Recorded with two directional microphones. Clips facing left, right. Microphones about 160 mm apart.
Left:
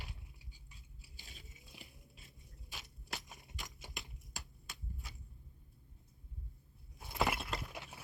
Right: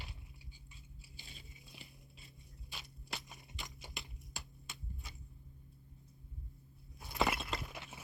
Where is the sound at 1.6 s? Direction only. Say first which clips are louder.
Left 1 dB; 10° left (ahead or behind).